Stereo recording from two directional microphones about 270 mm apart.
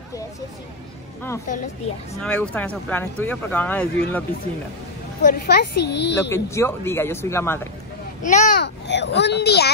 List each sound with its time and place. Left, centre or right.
2.1 s speech: centre
5.2 s a child's voice: left
6.3 s speech: centre
8.2 s a child's voice: left